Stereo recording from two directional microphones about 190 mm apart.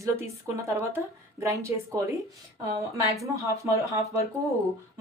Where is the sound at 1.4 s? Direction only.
15° right (ahead or behind).